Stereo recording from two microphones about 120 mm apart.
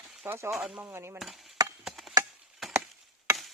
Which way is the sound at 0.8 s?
20° right (ahead or behind).